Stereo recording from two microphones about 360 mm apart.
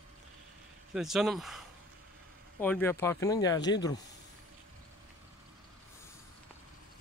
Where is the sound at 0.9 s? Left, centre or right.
Centre.